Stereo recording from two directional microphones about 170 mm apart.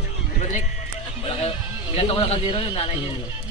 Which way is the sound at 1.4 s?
30° left (ahead or behind).